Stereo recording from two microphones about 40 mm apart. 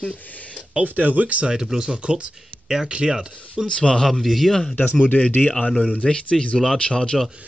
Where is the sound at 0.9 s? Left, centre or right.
Right.